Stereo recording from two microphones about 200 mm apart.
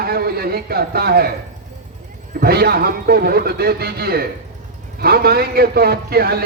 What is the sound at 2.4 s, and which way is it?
A man's voice, 50° right (ahead or behind).